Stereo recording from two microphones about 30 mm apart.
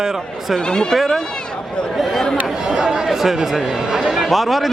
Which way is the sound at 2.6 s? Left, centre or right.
Right.